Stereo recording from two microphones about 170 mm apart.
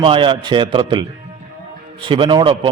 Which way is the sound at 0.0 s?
30° right (ahead or behind).